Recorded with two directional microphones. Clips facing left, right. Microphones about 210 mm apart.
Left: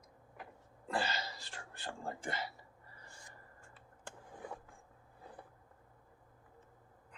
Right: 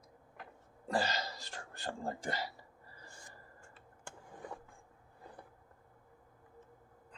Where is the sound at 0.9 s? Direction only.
40° right (ahead or behind).